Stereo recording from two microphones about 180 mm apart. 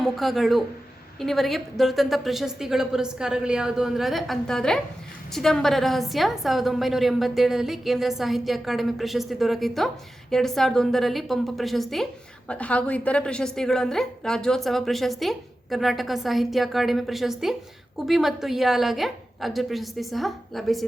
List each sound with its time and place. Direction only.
0.0 s a woman's voice: centre (ahead or behind)